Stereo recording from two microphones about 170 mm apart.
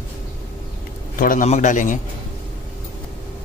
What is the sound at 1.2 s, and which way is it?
Speech, 50° left (ahead or behind).